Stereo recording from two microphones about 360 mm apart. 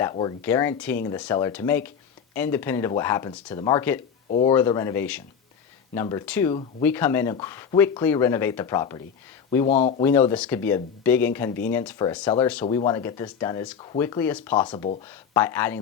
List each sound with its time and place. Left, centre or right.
0.0 s speech: centre
4.3 s speech: centre
4.5 s speech: centre
10.1 s speech: centre